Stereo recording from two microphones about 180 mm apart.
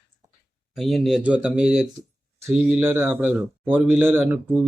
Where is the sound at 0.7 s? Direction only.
Centre (ahead or behind).